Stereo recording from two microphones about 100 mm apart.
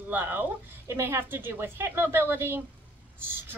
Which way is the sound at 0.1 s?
20° right (ahead or behind).